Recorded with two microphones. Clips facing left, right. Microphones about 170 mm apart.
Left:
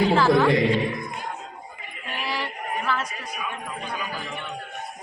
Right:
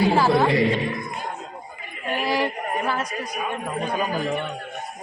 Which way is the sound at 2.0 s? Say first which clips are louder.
Right 7 dB; 45° right (ahead or behind).